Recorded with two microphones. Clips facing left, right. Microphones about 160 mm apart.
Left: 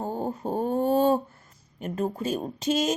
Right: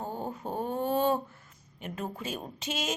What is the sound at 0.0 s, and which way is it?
Dog, 40° left (ahead or behind).